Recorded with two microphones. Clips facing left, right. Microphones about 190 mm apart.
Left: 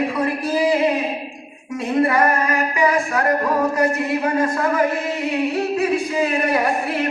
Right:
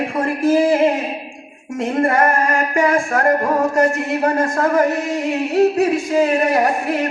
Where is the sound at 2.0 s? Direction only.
50° right (ahead or behind).